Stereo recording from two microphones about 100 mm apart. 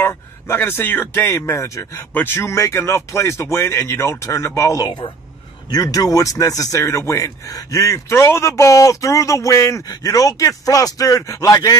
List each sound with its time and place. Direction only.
0.0 s speech: 25° left (ahead or behind)